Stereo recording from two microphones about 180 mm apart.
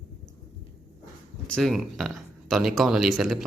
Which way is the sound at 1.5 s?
Centre (ahead or behind).